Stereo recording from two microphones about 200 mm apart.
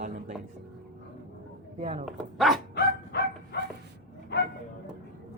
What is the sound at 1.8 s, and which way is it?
Speech, 35° right (ahead or behind).